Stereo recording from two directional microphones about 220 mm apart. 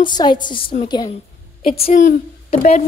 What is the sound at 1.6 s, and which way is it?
A woman's voice, 35° left (ahead or behind).